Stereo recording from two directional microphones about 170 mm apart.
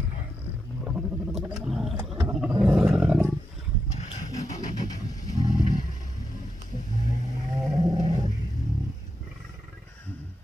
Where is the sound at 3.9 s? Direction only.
40° left (ahead or behind).